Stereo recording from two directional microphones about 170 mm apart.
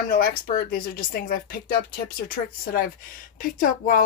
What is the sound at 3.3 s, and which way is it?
Speech, 50° left (ahead or behind).